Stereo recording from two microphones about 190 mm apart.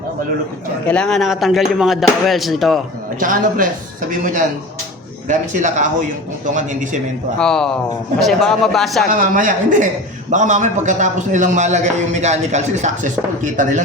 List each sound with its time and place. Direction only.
0.9 s speech: 5° left (ahead or behind)
3.2 s speech: 45° right (ahead or behind)
7.3 s speech: 5° left (ahead or behind)
9.0 s speech: 45° right (ahead or behind)